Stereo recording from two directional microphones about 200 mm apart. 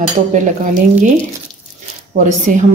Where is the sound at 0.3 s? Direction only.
40° right (ahead or behind).